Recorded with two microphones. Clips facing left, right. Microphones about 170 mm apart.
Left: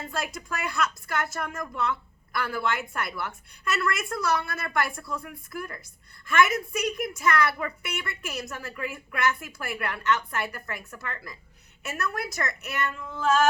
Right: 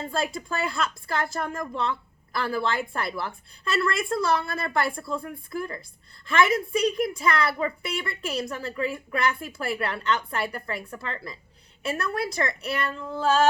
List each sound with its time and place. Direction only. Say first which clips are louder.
0.3 s a woman's voice: right 2 dB; 30° right (ahead or behind)